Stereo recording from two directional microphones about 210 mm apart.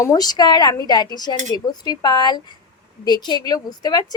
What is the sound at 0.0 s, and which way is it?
A woman's voice, 20° left (ahead or behind).